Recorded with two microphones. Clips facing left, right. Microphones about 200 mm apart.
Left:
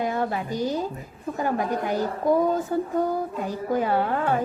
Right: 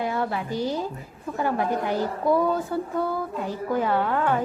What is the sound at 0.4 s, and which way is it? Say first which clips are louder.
Speech: left 1 dB; 15° left (ahead or behind).